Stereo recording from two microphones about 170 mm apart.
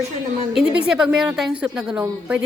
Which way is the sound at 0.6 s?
5° right (ahead or behind).